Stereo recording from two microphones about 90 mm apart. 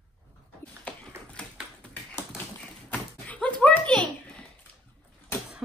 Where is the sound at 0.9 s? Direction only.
15° left (ahead or behind).